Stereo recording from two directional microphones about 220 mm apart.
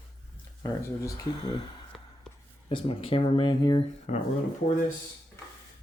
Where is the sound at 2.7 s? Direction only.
25° left (ahead or behind).